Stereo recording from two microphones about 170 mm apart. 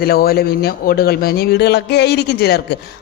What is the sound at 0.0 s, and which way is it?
A woman's voice, 65° left (ahead or behind).